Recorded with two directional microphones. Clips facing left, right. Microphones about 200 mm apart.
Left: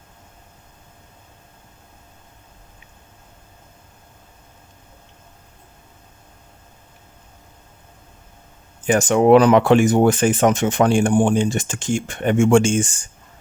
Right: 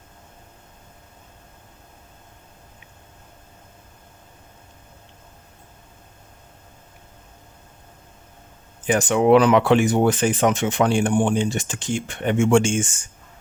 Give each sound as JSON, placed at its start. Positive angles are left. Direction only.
{"t": 8.9, "sound": "speech", "side_deg": 45}